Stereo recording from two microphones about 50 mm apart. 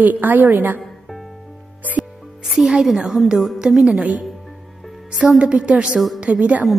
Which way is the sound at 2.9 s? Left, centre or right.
Centre.